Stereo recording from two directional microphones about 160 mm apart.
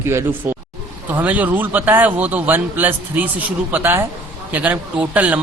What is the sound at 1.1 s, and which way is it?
A man's voice, 10° right (ahead or behind).